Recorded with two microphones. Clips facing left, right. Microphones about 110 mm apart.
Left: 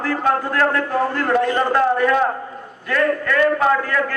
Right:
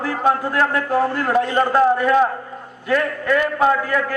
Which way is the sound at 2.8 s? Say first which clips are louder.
Even; 15° right (ahead or behind).